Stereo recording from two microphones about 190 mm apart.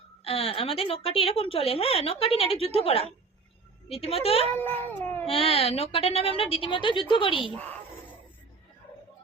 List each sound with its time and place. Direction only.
0.3 s a woman's voice: 30° left (ahead or behind)
4.5 s cat: 10° left (ahead or behind)
5.2 s a woman's voice: 30° left (ahead or behind)